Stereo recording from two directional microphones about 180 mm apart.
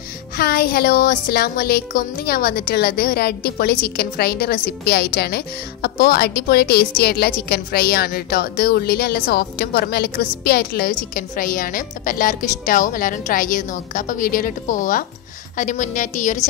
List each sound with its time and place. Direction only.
0.4 s a woman's voice: 60° left (ahead or behind)